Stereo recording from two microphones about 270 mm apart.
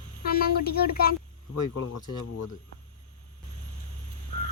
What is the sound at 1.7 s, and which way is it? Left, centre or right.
Speech, left.